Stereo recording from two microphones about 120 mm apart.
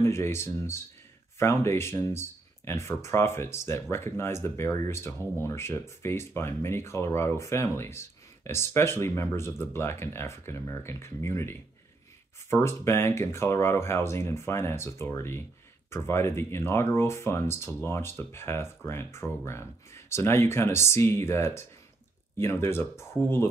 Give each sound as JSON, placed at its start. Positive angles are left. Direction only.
{"t": 0.0, "sound": "speech", "side_deg": 20}
{"t": 12.6, "sound": "speech", "side_deg": 20}